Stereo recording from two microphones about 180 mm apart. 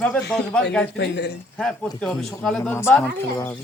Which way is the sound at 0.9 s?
65° left (ahead or behind).